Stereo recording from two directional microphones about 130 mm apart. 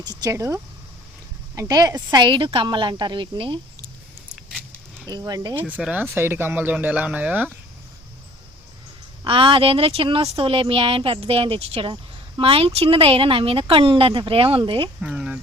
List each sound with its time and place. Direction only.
0.0 s speech: 30° right (ahead or behind)
5.0 s speech: 30° right (ahead or behind)
5.5 s speech: 10° right (ahead or behind)
9.2 s speech: 40° right (ahead or behind)
15.0 s speech: 5° right (ahead or behind)